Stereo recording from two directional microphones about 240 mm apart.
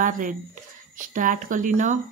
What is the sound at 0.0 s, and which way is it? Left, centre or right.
Speech, right.